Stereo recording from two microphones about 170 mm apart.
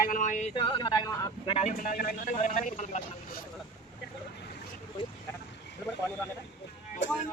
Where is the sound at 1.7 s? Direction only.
55° left (ahead or behind).